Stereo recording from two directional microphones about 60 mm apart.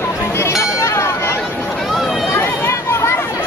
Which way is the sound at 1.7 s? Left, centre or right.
Centre.